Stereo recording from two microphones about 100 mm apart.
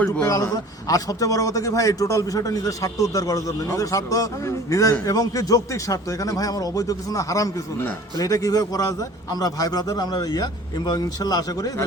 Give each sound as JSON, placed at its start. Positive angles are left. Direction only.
{"t": 0.3, "sound": "a man's voice", "side_deg": 35}